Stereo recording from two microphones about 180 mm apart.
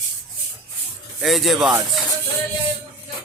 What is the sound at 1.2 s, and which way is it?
Speech, centre (ahead or behind).